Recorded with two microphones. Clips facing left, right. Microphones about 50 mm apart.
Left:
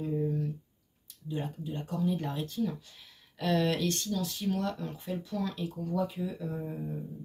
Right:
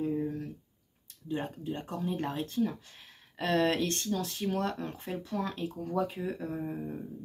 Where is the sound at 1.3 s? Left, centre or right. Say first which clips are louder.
Right 2 dB; right.